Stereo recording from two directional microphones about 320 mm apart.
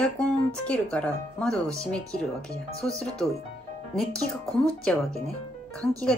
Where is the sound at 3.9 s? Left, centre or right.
Centre.